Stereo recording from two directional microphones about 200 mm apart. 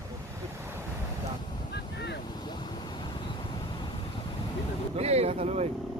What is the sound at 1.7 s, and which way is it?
Boat, 55° left (ahead or behind).